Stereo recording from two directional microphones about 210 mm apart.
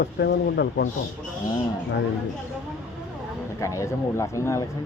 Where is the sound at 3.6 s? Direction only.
15° left (ahead or behind).